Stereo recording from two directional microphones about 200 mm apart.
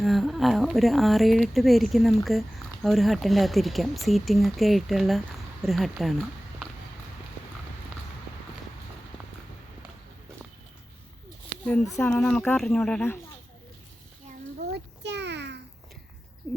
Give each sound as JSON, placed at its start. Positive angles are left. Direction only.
{"t": 0.0, "sound": "speech", "side_deg": 0}
{"t": 11.9, "sound": "speech", "side_deg": 5}
{"t": 14.6, "sound": "a sound", "side_deg": -55}